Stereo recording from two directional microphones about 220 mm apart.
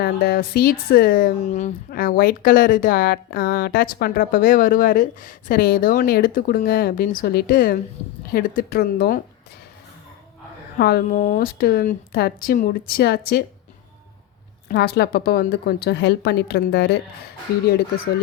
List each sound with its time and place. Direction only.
0.0 s speech: 45° left (ahead or behind)
10.8 s speech: 45° left (ahead or behind)
14.7 s speech: 45° left (ahead or behind)